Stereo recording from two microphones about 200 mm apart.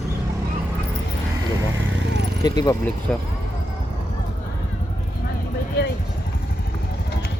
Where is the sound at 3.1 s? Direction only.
5° left (ahead or behind).